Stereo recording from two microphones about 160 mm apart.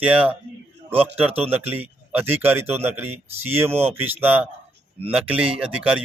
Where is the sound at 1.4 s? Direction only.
10° right (ahead or behind).